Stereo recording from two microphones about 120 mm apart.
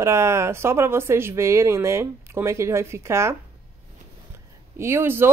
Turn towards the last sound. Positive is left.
turn(degrees=-20)  # may be behind; listen again after turning